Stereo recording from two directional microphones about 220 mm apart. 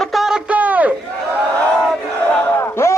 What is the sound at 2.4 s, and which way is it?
Battle cry, 10° left (ahead or behind).